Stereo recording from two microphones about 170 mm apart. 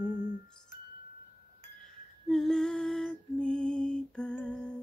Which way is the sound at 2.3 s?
5° left (ahead or behind).